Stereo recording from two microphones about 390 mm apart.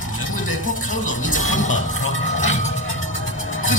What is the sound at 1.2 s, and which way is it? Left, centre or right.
Music, left.